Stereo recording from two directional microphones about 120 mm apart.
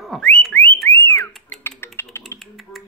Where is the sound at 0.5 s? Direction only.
15° left (ahead or behind).